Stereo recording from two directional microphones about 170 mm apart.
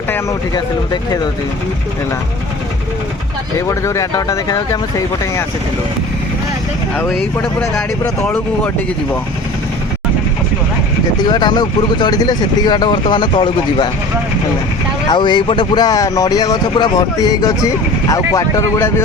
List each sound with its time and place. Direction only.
3.7 s speech: 15° left (ahead or behind)
8.2 s speech: 10° left (ahead or behind)
11.2 s speech: 25° left (ahead or behind)
15.0 s speech: 25° left (ahead or behind)